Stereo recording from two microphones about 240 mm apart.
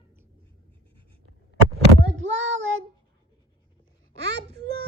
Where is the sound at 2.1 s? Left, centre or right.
Right.